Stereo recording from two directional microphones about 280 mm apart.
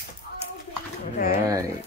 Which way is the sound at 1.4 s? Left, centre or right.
Centre.